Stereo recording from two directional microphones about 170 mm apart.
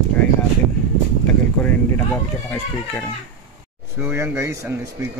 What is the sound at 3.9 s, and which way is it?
Speech, 15° right (ahead or behind).